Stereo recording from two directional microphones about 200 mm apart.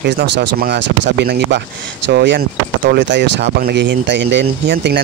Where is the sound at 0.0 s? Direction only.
55° right (ahead or behind).